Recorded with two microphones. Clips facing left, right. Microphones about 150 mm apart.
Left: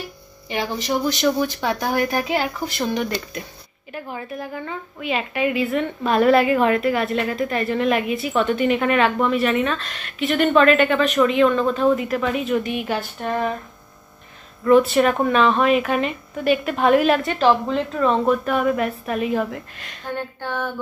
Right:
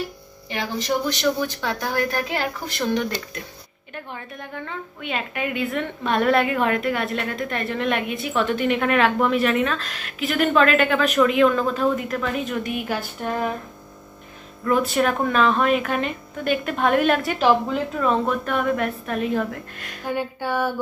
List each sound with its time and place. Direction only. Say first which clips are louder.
1.0 s a woman's voice: left 3 dB; 15° left (ahead or behind)
14.6 s a woman's voice: left 6 dB; centre (ahead or behind)